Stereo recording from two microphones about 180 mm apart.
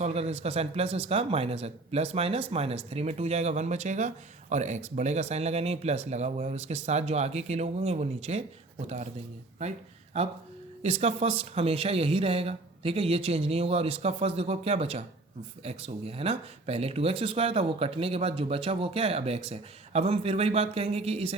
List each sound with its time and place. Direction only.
0.0 s speech: 35° right (ahead or behind)
10.1 s speech: 35° right (ahead or behind)